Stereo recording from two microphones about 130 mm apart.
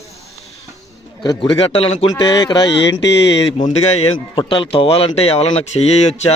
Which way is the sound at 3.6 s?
55° left (ahead or behind).